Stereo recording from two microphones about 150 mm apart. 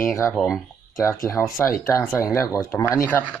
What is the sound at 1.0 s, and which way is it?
Speech, 20° left (ahead or behind).